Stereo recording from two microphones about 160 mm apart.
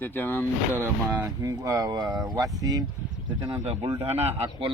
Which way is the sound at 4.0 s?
40° right (ahead or behind).